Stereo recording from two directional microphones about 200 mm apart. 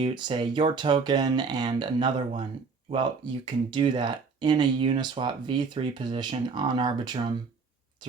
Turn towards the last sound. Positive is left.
turn(degrees=-20)  # may be behind; listen again after turning